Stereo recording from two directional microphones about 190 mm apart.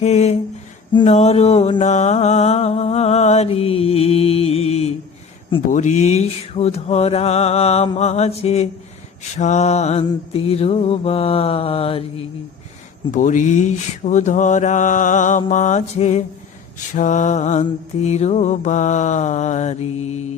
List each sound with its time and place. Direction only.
0.0 s mantra: 35° left (ahead or behind)
13.1 s mantra: 40° left (ahead or behind)